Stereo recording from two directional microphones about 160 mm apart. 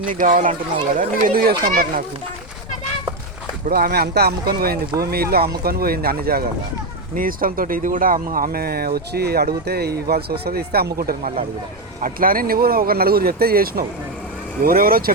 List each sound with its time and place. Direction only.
0.0 s speech: 60° right (ahead or behind)
3.7 s speech: 75° right (ahead or behind)